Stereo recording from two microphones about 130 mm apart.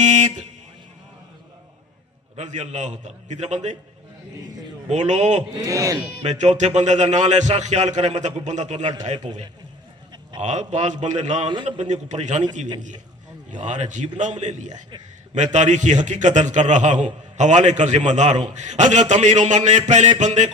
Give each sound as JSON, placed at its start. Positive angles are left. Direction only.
{"t": 0.0, "sound": "speech", "side_deg": -65}
{"t": 2.3, "sound": "a man's voice", "side_deg": -60}
{"t": 4.9, "sound": "a man's voice", "side_deg": -60}
{"t": 5.4, "sound": "a man's voice", "side_deg": -25}
{"t": 6.2, "sound": "a man's voice", "side_deg": -65}
{"t": 9.1, "sound": "speech", "side_deg": -35}
{"t": 10.4, "sound": "a man's voice", "side_deg": -65}
{"t": 11.4, "sound": "speech", "side_deg": -35}
{"t": 11.8, "sound": "a man's voice", "side_deg": -65}
{"t": 13.5, "sound": "a man's voice", "side_deg": -65}
{"t": 14.7, "sound": "speech", "side_deg": -35}
{"t": 15.5, "sound": "a man's voice", "side_deg": -65}